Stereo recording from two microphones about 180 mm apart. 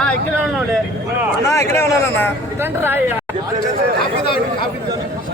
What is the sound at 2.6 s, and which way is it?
Speech, 10° right (ahead or behind).